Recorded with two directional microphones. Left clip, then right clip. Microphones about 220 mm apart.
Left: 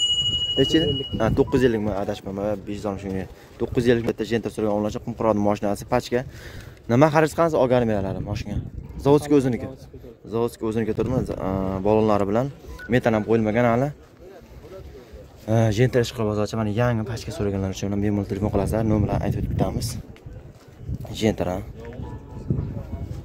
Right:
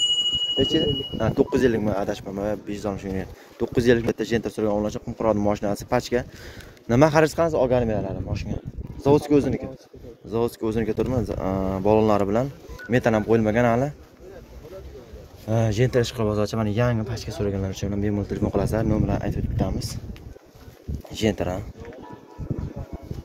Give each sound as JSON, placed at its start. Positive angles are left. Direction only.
{"t": 0.0, "sound": "a sound", "side_deg": -30}
{"t": 0.6, "sound": "speech", "side_deg": 30}
{"t": 1.7, "sound": "speech", "side_deg": 0}
{"t": 7.4, "sound": "speech", "side_deg": 25}
{"t": 10.3, "sound": "speech", "side_deg": 0}
{"t": 15.4, "sound": "speech", "side_deg": 20}
{"t": 21.1, "sound": "speech", "side_deg": 10}